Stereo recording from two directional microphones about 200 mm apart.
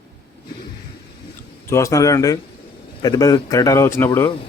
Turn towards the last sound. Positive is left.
turn(degrees=10)  # may be behind; listen again after turning